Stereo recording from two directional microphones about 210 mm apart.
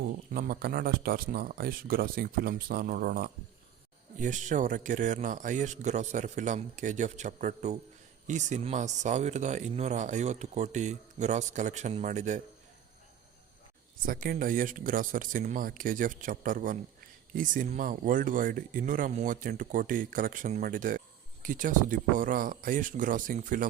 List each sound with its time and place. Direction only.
0.0 s speech: 45° right (ahead or behind)
14.0 s speech: 40° right (ahead or behind)